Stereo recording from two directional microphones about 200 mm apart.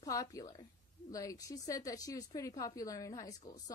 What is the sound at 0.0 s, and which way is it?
A woman's voice, 15° left (ahead or behind).